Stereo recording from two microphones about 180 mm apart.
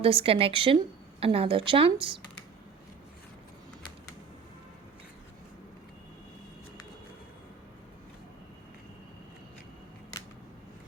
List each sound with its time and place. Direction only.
0.0 s a woman's voice: 30° right (ahead or behind)